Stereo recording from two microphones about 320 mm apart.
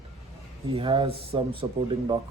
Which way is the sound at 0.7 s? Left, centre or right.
Centre.